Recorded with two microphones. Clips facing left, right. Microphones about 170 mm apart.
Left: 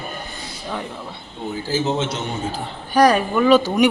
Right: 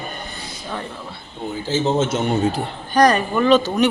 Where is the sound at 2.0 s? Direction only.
50° right (ahead or behind).